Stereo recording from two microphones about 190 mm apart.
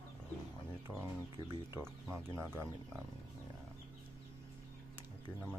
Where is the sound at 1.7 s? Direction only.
15° right (ahead or behind).